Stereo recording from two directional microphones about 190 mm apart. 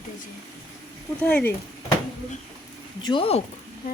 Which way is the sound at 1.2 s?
5° left (ahead or behind).